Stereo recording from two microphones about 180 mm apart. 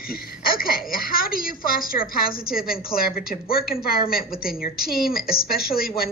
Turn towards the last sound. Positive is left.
turn(degrees=55)  # may be behind; listen again after turning